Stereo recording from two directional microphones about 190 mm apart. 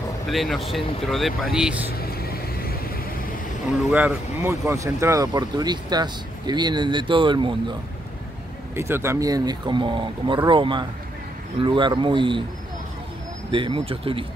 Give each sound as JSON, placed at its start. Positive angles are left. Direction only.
{"t": 0.3, "sound": "speech", "side_deg": 0}
{"t": 1.9, "sound": "vehicle", "side_deg": 55}
{"t": 3.9, "sound": "speech", "side_deg": -10}
{"t": 8.7, "sound": "speech", "side_deg": -15}
{"t": 13.5, "sound": "speech", "side_deg": -25}